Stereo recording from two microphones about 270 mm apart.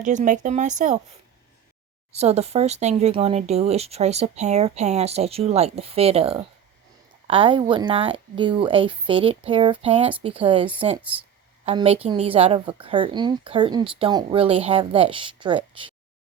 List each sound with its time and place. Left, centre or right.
0.0 s speech: right
2.1 s a woman's voice: right